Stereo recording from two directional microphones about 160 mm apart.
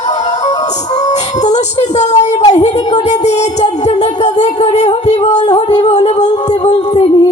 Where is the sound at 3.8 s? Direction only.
45° left (ahead or behind).